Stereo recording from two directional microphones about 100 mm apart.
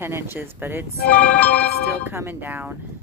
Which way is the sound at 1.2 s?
15° left (ahead or behind).